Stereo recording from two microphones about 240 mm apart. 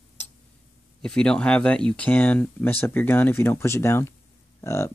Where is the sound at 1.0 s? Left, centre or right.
Centre.